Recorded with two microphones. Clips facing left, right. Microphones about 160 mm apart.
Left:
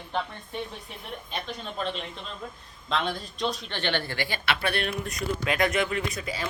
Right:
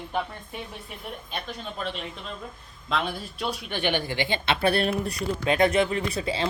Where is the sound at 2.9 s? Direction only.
5° right (ahead or behind); by 6.4 s 30° right (ahead or behind).